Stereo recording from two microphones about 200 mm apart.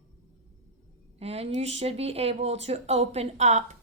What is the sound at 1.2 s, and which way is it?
A woman's voice, 30° right (ahead or behind).